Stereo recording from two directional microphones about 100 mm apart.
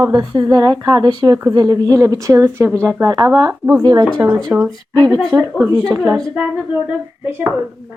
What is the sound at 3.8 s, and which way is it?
Speech, 45° right (ahead or behind).